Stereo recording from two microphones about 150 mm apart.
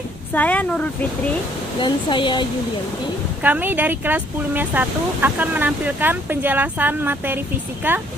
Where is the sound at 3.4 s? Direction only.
10° right (ahead or behind).